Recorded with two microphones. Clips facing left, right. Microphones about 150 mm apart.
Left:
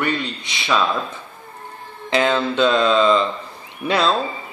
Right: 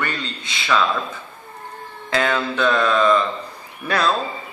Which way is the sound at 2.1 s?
20° left (ahead or behind).